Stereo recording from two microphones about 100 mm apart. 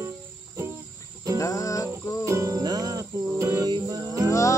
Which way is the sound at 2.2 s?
30° right (ahead or behind).